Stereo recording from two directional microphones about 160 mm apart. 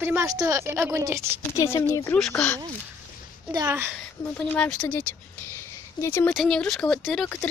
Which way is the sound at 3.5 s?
15° right (ahead or behind).